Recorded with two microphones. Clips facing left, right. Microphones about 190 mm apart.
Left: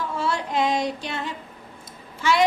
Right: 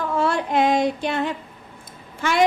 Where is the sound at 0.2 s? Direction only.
55° right (ahead or behind).